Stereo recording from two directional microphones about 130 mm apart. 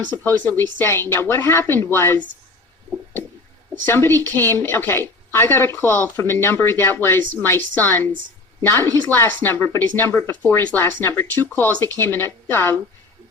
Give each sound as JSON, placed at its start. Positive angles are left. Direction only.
{"t": 0.1, "sound": "a woman's voice", "side_deg": 15}
{"t": 3.8, "sound": "a woman's voice", "side_deg": 15}